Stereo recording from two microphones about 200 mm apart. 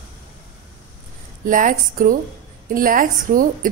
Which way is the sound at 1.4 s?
40° right (ahead or behind).